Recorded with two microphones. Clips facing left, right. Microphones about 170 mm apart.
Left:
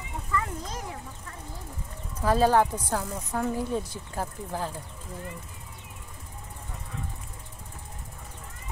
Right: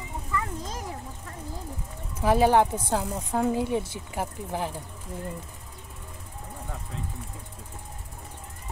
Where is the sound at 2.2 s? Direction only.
15° right (ahead or behind).